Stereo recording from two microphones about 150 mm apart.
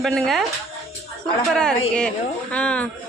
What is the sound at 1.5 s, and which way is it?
A woman's voice, 5° left (ahead or behind).